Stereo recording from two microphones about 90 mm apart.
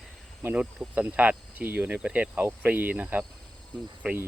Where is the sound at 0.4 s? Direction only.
10° right (ahead or behind).